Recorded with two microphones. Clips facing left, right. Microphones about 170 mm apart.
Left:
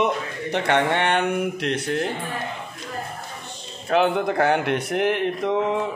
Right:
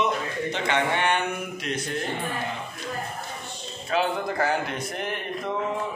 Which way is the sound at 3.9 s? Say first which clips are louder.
Left 6 dB; 65° left (ahead or behind).